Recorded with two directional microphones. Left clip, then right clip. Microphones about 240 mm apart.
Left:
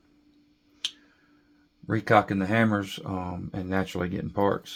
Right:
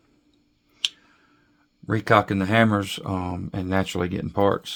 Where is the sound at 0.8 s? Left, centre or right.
Right.